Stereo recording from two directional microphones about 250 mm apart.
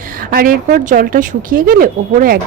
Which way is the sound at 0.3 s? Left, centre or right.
Right.